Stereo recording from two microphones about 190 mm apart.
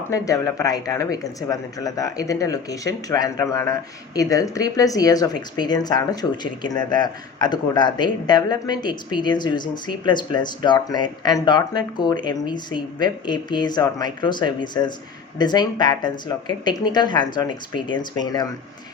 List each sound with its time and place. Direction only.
0.1 s speech: 15° left (ahead or behind)